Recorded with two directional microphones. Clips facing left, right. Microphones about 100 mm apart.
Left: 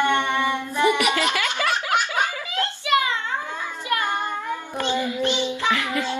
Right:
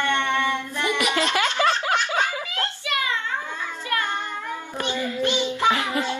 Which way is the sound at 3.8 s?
15° left (ahead or behind).